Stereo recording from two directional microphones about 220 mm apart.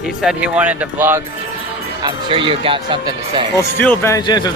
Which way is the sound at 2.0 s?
20° right (ahead or behind).